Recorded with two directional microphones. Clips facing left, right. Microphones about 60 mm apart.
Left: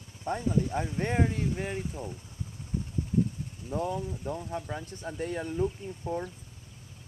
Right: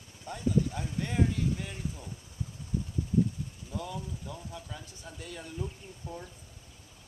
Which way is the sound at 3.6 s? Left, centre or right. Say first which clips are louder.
Left 8 dB; left.